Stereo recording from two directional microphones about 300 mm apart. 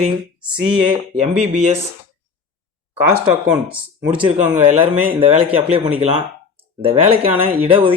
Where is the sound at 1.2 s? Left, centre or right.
Right.